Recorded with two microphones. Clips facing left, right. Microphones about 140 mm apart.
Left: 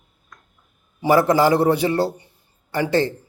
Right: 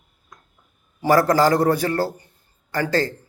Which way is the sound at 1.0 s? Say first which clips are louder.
Left 1 dB; 15° left (ahead or behind).